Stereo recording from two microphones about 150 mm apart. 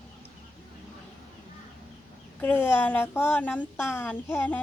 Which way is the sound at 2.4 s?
15° left (ahead or behind).